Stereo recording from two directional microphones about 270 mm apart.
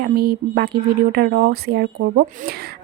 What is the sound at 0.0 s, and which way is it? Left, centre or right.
Speech, right.